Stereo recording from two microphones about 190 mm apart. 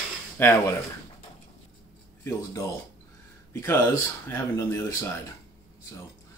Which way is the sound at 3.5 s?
15° left (ahead or behind).